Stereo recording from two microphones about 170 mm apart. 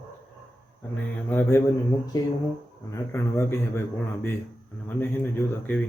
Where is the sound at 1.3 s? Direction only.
15° left (ahead or behind).